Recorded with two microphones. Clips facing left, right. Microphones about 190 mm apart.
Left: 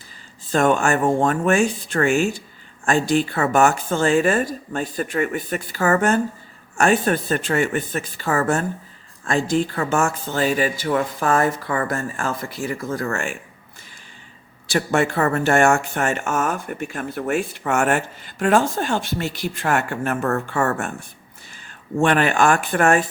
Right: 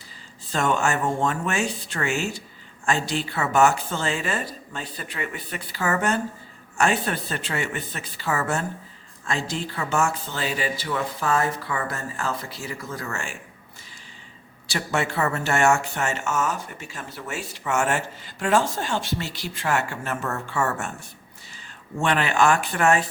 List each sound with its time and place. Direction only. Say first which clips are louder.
0.5 s speech: left 6 dB; 50° left (ahead or behind)
14.7 s speech: left 6 dB; 50° left (ahead or behind)